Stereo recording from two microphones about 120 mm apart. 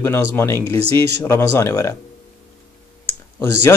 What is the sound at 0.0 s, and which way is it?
A man's voice, 20° left (ahead or behind).